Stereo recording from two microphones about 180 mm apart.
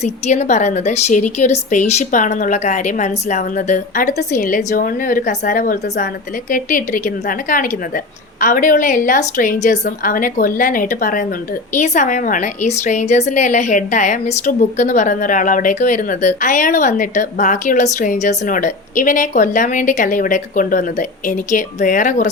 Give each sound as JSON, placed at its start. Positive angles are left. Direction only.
{"t": 0.0, "sound": "a woman's voice", "side_deg": 40}